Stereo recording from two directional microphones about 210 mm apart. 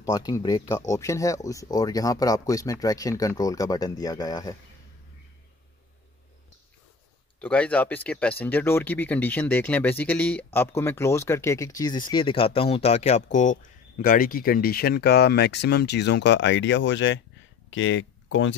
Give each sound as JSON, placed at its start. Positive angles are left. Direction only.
{"t": 0.0, "sound": "speech", "side_deg": 15}
{"t": 7.3, "sound": "speech", "side_deg": 5}